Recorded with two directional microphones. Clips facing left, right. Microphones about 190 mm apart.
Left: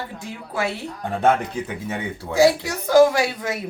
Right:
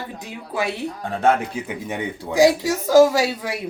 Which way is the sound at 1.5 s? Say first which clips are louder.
Even; 15° right (ahead or behind).